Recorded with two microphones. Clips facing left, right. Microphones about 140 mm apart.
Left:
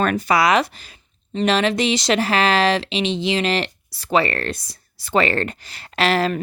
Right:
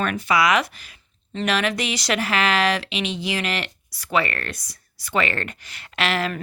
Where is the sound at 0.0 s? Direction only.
40° left (ahead or behind).